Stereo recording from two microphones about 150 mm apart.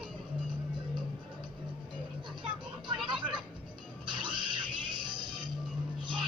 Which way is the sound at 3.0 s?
30° right (ahead or behind).